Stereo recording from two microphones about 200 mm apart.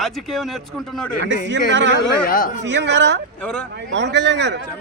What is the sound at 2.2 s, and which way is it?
Speech, 45° left (ahead or behind).